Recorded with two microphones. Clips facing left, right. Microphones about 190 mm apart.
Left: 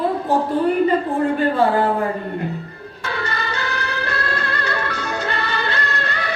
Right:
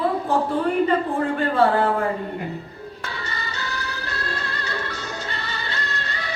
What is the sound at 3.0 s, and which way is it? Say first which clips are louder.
Music: left 9 dB; 65° left (ahead or behind).